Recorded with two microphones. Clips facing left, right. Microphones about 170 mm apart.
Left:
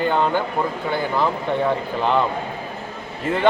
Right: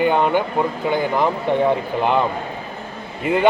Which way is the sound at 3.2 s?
10° right (ahead or behind).